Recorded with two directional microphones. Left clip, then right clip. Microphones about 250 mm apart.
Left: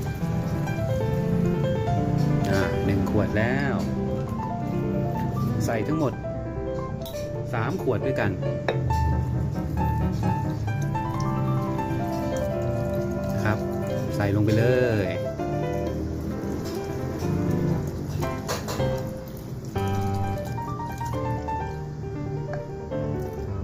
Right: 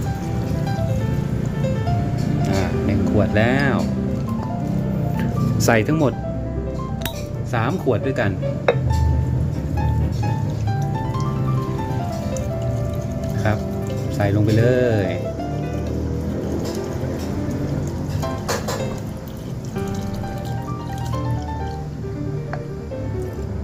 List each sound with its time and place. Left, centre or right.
3.2 s speech: centre
5.5 s speech: right
5.9 s speech: centre
7.5 s speech: centre
14.2 s music: centre